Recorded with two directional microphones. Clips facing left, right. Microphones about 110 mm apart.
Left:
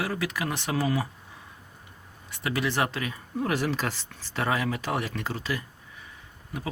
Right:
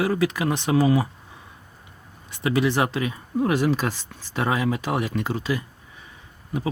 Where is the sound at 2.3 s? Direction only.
20° right (ahead or behind).